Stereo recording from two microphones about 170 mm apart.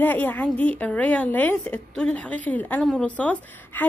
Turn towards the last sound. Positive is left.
turn(degrees=10)  # may be behind; listen again after turning